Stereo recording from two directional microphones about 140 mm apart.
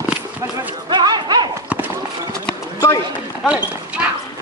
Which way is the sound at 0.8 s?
30° right (ahead or behind).